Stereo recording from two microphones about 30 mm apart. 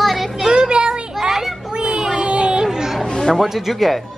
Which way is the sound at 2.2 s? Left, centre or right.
Right.